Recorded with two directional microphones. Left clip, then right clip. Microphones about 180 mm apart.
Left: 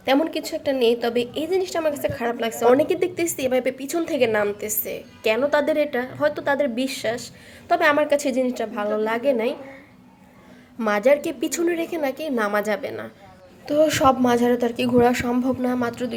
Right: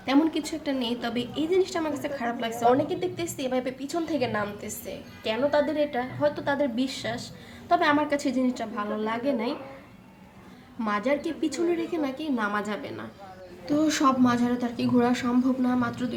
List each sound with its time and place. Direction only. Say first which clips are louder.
0.0 s a woman's voice: left 4 dB; 35° left (ahead or behind)
10.8 s a woman's voice: left 8 dB; 50° left (ahead or behind)